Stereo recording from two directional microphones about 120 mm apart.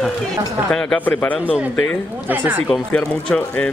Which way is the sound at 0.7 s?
5° left (ahead or behind).